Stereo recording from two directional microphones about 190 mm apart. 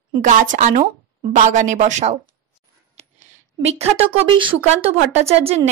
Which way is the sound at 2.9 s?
35° right (ahead or behind).